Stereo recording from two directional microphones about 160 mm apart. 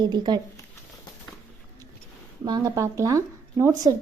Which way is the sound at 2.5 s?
25° right (ahead or behind).